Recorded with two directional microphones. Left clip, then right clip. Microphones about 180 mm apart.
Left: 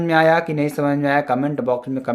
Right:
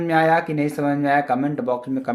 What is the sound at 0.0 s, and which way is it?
Speech, 45° left (ahead or behind).